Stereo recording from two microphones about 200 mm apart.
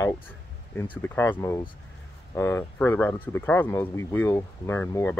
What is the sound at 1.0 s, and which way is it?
Speech, 10° left (ahead or behind).